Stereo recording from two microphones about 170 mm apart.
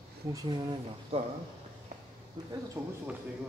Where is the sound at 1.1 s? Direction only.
35° right (ahead or behind).